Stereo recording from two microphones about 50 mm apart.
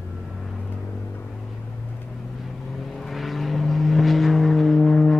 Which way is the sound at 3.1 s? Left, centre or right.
Centre.